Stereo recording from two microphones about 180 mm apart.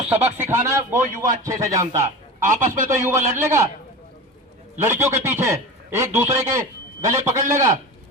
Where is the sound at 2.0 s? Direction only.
45° right (ahead or behind).